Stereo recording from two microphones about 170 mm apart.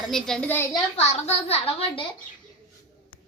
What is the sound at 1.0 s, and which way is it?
A woman's voice, 40° left (ahead or behind).